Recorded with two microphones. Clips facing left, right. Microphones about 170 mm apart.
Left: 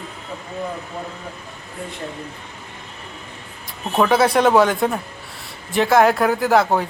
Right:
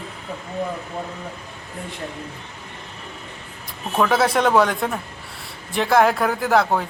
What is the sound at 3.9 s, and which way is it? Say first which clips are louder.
Speech: left 3 dB; centre (ahead or behind).